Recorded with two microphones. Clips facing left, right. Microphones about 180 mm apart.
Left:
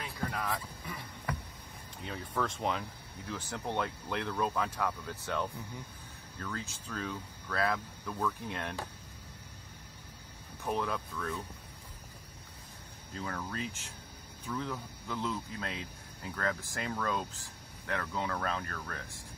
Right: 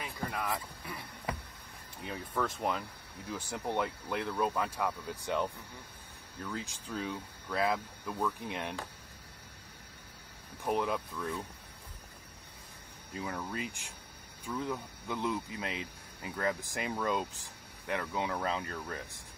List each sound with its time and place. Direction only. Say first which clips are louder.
0.0 s a sound: even; centre (ahead or behind)
2.0 s speech: even; 5° right (ahead or behind)
10.6 s speech: right 2 dB; 15° right (ahead or behind)
13.1 s speech: right 1 dB; 10° right (ahead or behind)